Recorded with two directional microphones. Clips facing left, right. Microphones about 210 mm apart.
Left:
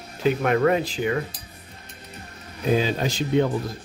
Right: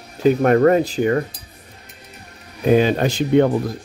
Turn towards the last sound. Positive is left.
turn(degrees=-60)  # may be behind; listen again after turning